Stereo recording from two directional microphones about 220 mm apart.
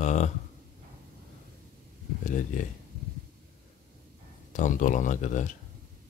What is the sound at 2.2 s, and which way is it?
Speech, 35° left (ahead or behind).